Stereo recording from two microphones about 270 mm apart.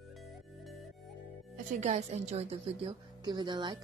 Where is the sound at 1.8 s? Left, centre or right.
Right.